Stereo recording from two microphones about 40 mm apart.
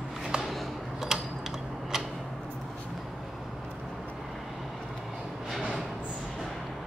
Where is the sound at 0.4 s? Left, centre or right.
Centre.